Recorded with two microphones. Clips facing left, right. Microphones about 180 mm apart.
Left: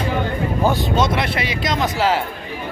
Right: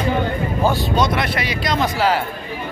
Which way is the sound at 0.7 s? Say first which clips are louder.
Even; 20° left (ahead or behind).